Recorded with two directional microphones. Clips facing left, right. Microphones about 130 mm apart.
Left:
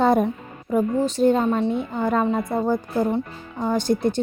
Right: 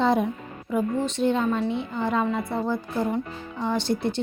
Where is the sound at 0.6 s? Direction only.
40° left (ahead or behind).